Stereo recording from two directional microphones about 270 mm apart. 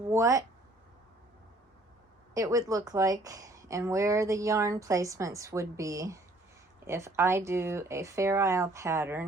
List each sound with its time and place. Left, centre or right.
0.1 s speech: centre
2.3 s a woman's voice: centre